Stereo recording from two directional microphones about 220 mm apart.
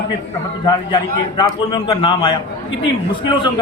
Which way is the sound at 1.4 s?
25° left (ahead or behind).